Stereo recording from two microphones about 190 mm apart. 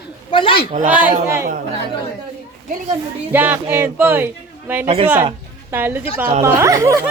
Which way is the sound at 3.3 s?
10° right (ahead or behind).